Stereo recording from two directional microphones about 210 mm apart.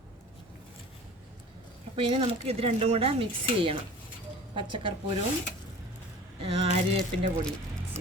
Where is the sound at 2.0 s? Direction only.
25° right (ahead or behind).